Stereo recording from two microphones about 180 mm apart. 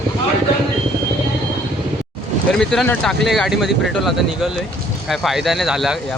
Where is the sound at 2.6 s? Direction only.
5° left (ahead or behind).